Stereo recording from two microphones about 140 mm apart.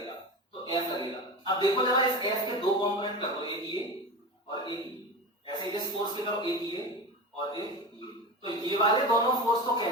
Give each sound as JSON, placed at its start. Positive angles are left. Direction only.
{"t": 0.7, "sound": "a sound", "side_deg": 30}
{"t": 1.5, "sound": "speech", "side_deg": 30}
{"t": 5.5, "sound": "speech", "side_deg": 30}